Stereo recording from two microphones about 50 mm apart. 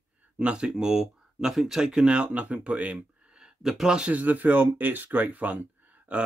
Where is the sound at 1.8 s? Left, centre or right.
Centre.